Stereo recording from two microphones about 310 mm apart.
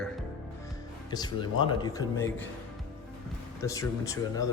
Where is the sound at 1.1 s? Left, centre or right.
Centre.